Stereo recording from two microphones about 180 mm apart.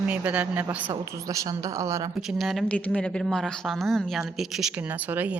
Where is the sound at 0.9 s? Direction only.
20° right (ahead or behind).